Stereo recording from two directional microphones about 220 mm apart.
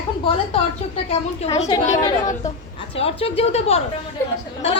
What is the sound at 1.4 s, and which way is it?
A woman's voice, 30° left (ahead or behind).